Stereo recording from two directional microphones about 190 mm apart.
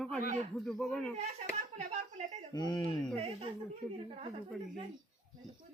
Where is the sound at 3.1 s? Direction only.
30° right (ahead or behind).